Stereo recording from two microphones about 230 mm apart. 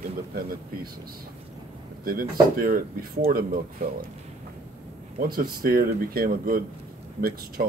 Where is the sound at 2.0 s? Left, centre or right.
Right.